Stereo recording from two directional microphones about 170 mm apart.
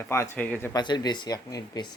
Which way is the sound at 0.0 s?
15° left (ahead or behind).